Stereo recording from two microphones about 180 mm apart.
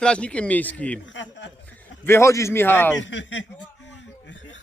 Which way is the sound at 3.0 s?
90° left.